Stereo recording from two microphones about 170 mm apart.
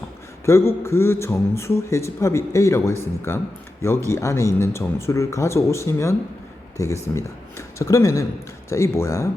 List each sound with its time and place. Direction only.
0.4 s a man's voice: 15° left (ahead or behind)